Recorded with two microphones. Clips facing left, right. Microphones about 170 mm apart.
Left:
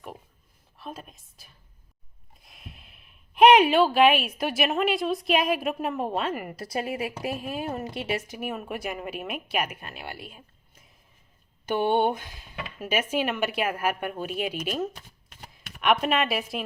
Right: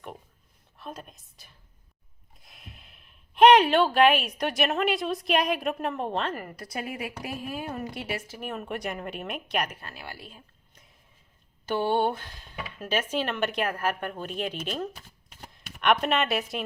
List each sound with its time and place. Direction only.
0.8 s speech: centre (ahead or behind)
6.6 s a woman's voice: 30° left (ahead or behind)
8.4 s speech: 5° left (ahead or behind)
11.7 s speech: 20° left (ahead or behind); by 16.6 s centre (ahead or behind)